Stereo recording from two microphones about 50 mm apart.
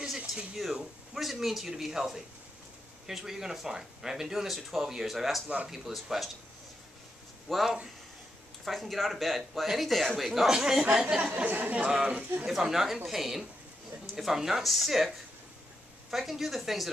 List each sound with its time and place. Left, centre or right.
1.1 s speech: centre
7.4 s speech: centre
11.3 s speech: right
12.0 s a man's voice: right
12.4 s speech: centre